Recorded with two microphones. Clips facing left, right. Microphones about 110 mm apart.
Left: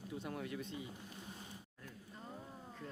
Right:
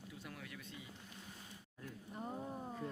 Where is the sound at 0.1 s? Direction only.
30° left (ahead or behind).